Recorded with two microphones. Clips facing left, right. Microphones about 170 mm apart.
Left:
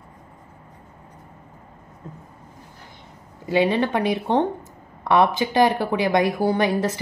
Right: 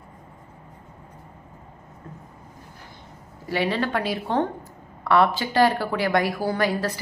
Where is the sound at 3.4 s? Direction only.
20° left (ahead or behind).